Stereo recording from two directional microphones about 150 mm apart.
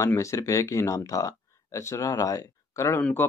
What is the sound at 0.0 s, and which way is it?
Speech, 20° left (ahead or behind).